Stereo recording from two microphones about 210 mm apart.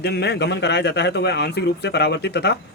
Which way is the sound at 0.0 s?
50° left (ahead or behind).